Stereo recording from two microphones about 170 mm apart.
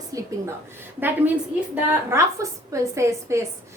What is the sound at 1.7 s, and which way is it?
A woman's voice, 15° right (ahead or behind).